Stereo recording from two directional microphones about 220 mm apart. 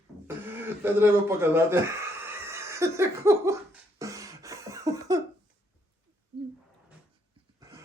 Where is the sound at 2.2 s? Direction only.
10° right (ahead or behind).